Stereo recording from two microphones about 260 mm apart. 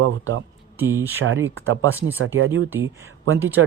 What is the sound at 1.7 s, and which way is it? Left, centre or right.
Speech, right.